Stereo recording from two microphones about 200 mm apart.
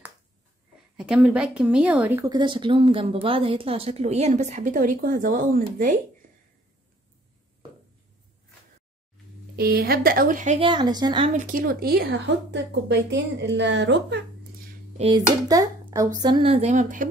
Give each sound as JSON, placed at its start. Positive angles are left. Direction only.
{"t": 0.9, "sound": "speech", "side_deg": -5}
{"t": 2.3, "sound": "speech", "side_deg": -25}
{"t": 9.6, "sound": "a woman's voice", "side_deg": -50}
{"t": 10.7, "sound": "speech", "side_deg": -20}
{"t": 11.4, "sound": "a woman's voice", "side_deg": -45}
{"t": 15.0, "sound": "speech", "side_deg": -25}